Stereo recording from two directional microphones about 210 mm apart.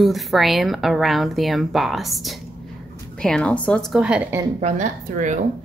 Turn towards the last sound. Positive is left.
turn(degrees=-35)  # may be behind; listen again after turning